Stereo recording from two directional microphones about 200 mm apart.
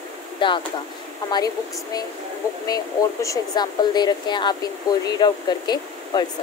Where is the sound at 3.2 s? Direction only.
20° left (ahead or behind).